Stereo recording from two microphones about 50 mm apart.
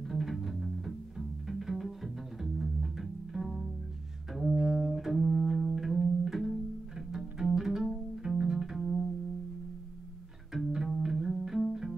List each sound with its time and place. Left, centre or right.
0.1 s music: centre
10.5 s music: centre